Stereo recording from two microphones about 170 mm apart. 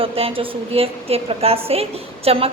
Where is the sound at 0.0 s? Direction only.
35° right (ahead or behind).